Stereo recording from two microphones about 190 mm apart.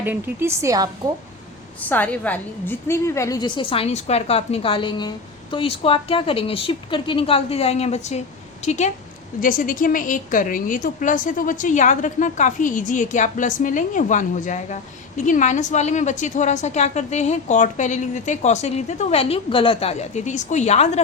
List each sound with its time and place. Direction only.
0.0 s a woman's voice: 10° right (ahead or behind)
1.9 s a woman's voice: 10° left (ahead or behind); by 21.0 s 35° left (ahead or behind)